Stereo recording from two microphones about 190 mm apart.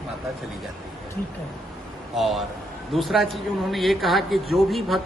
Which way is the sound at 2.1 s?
Centre (ahead or behind).